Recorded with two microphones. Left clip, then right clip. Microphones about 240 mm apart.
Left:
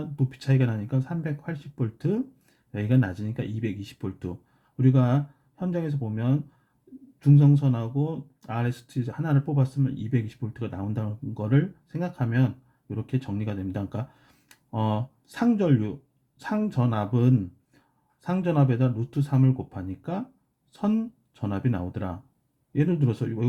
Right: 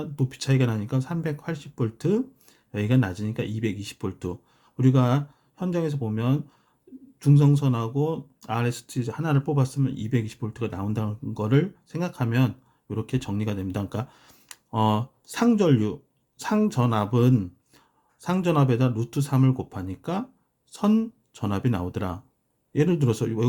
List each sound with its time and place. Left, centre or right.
0.0 s speech: centre